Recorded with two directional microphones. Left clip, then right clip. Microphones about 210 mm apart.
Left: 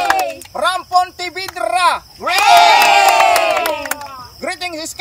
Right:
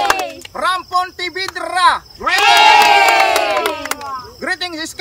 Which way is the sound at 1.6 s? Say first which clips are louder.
Right 1 dB; centre (ahead or behind).